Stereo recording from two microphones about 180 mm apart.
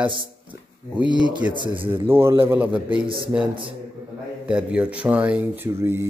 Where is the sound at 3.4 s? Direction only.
30° right (ahead or behind).